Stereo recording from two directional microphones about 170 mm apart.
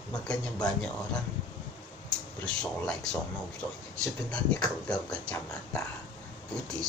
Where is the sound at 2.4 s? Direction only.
5° left (ahead or behind).